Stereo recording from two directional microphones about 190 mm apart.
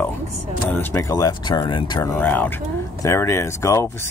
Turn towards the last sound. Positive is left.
turn(degrees=15)  # may be behind; listen again after turning